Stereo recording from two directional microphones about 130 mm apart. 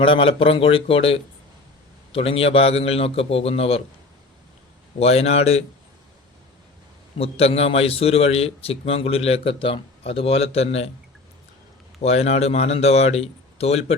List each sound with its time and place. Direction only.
0.0 s a man's voice: 45° left (ahead or behind)
4.9 s a man's voice: 55° left (ahead or behind)
7.2 s a man's voice: 50° left (ahead or behind)
12.0 s a man's voice: 55° left (ahead or behind)